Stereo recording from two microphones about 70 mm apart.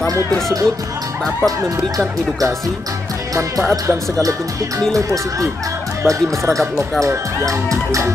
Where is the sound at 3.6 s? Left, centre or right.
Right.